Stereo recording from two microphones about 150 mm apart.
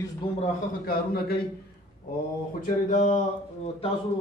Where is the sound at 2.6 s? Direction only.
60° left (ahead or behind).